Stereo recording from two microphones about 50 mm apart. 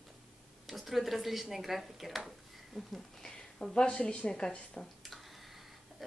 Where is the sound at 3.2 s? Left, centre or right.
Centre.